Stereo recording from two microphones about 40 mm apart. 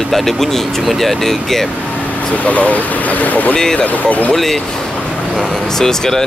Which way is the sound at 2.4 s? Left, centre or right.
Left.